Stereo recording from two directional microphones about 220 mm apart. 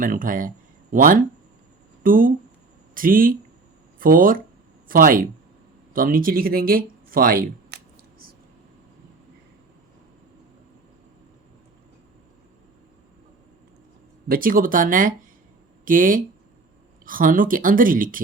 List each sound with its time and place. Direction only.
0.0 s speech: 40° right (ahead or behind)
14.3 s speech: 40° right (ahead or behind)